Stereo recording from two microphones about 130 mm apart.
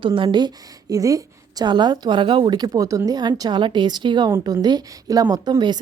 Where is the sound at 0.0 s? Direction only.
40° right (ahead or behind).